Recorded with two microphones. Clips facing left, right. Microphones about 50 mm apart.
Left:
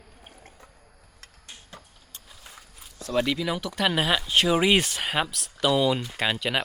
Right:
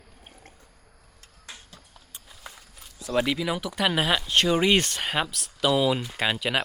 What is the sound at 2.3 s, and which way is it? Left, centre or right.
Speech, centre.